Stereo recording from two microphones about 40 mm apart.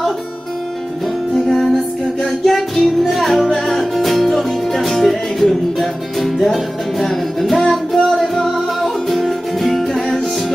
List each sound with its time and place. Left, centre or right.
1.3 s music: centre